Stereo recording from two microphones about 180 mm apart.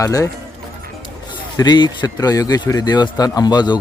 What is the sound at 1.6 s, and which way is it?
Speech, 25° left (ahead or behind).